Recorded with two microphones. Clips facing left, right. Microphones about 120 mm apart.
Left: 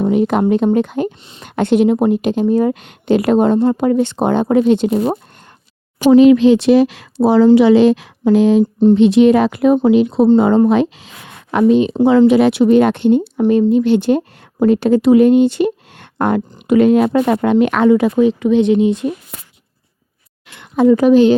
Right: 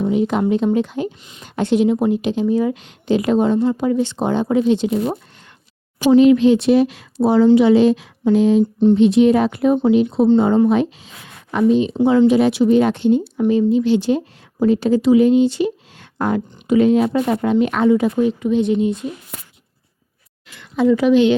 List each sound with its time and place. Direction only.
0.0 s a woman's voice: 60° left (ahead or behind)
6.1 s a woman's voice: 90° left
20.5 s a woman's voice: 55° left (ahead or behind)